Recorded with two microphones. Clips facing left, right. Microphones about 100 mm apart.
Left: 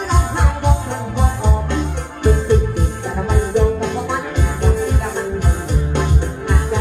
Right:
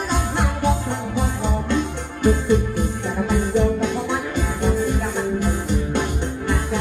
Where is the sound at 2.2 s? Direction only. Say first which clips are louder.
Left 2 dB; 20° left (ahead or behind).